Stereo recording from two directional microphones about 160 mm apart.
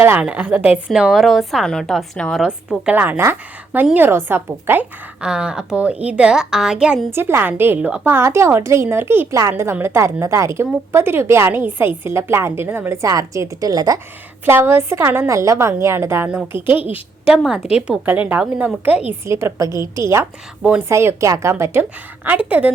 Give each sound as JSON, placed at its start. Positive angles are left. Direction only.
{"t": 0.0, "sound": "a woman's voice", "side_deg": -10}